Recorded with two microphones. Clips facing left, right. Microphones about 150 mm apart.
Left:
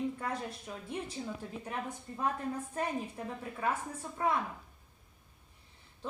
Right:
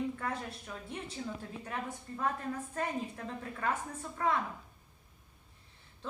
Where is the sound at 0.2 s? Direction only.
15° left (ahead or behind).